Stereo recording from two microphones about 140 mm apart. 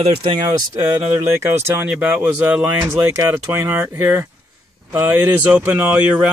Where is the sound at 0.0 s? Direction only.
40° right (ahead or behind).